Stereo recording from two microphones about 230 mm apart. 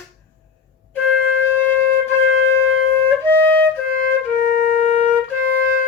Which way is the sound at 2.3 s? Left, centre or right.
Right.